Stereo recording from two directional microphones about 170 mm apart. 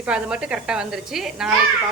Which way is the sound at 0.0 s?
5° right (ahead or behind).